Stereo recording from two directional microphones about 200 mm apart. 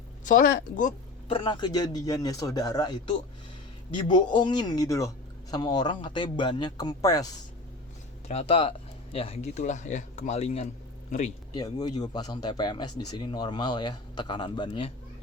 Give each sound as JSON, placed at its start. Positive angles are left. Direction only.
{"t": 0.3, "sound": "speech", "side_deg": 45}
{"t": 1.3, "sound": "speech", "side_deg": 20}
{"t": 8.3, "sound": "speech", "side_deg": 30}
{"t": 11.5, "sound": "speech", "side_deg": 20}